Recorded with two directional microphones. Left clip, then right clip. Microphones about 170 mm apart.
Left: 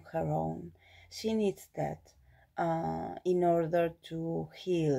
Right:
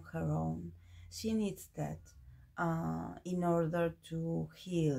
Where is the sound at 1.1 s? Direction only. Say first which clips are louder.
Left 6 dB; 35° left (ahead or behind).